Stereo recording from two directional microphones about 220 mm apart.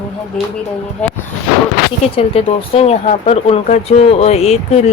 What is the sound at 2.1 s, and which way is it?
Speech, 25° left (ahead or behind).